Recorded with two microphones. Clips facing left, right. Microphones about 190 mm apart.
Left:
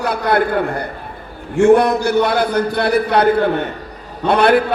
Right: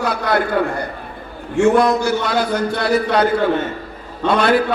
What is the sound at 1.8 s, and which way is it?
A man's voice, 60° left (ahead or behind).